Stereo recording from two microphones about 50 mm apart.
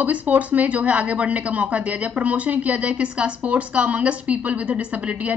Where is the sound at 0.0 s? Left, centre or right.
Right.